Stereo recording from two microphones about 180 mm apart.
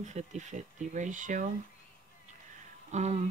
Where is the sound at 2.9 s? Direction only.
35° right (ahead or behind).